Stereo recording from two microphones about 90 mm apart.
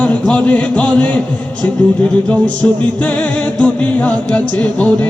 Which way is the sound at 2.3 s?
15° left (ahead or behind).